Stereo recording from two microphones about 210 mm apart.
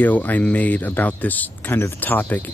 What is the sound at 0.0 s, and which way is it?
Speech, 10° left (ahead or behind).